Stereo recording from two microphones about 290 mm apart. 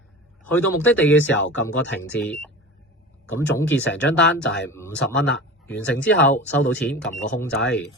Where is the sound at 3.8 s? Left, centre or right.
Left.